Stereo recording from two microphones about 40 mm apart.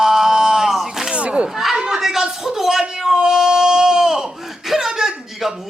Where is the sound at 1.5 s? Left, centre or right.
Centre.